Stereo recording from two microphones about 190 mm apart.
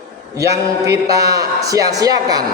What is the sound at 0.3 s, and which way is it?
A man's voice, 15° right (ahead or behind).